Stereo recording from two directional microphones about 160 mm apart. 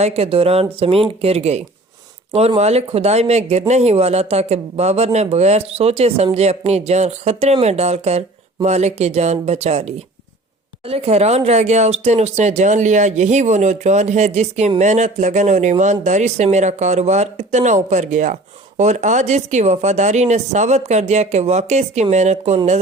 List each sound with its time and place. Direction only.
0.0 s speech: 40° right (ahead or behind)